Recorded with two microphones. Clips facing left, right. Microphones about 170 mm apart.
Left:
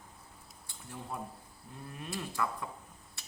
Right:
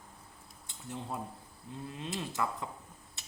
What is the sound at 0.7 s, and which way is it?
Cutlery, 20° right (ahead or behind).